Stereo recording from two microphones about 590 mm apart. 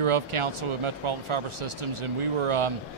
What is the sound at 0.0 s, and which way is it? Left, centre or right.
A man's voice, right.